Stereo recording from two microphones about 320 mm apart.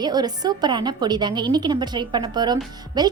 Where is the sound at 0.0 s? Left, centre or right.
Centre.